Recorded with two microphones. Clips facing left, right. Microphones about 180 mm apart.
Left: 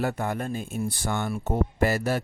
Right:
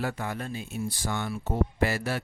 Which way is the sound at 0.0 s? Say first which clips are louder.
Left 4 dB; 45° left (ahead or behind).